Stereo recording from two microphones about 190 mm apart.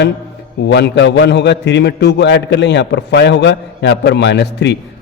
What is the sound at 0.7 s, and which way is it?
A man's voice, 65° left (ahead or behind).